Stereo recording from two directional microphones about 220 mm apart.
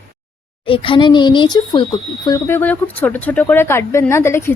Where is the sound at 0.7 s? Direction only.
25° left (ahead or behind).